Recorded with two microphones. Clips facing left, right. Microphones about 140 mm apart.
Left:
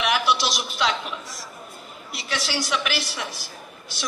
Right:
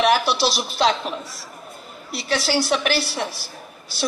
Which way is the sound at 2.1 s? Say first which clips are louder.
Right 7 dB; 35° right (ahead or behind).